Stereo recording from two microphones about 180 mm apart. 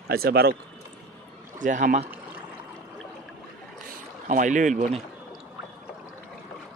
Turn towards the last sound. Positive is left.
turn(degrees=-45)  # may be behind; listen again after turning